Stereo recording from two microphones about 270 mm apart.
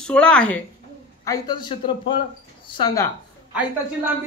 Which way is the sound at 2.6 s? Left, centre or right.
Centre.